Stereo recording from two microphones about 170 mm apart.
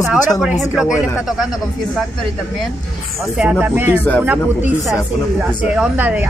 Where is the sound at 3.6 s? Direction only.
10° right (ahead or behind).